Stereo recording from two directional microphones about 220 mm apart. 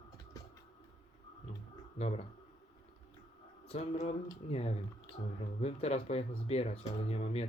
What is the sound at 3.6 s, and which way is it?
Speech, 25° left (ahead or behind).